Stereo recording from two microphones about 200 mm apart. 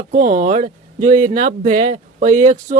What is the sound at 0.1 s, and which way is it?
Speech, 40° right (ahead or behind).